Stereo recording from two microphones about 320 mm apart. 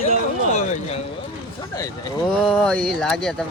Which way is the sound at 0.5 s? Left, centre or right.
Left.